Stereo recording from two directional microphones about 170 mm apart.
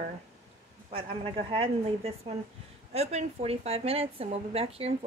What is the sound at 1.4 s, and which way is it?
A woman's voice, 35° right (ahead or behind).